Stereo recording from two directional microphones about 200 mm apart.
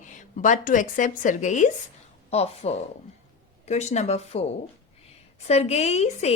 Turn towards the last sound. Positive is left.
turn(degrees=35)  # may be behind; listen again after turning